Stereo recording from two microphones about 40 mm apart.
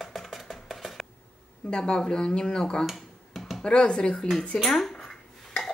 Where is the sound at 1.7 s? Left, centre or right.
Centre.